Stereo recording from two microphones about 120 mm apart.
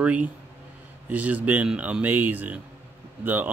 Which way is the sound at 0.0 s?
10° right (ahead or behind).